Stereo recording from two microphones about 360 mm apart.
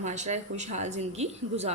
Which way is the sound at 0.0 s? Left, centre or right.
Centre.